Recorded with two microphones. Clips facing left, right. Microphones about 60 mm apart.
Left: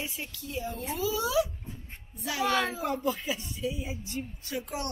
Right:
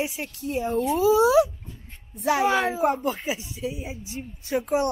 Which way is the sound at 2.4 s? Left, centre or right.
Centre.